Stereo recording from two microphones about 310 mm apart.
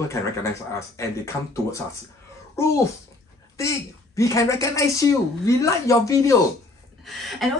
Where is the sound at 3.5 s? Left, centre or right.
Centre.